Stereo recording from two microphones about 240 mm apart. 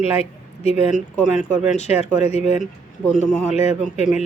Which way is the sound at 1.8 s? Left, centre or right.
Left.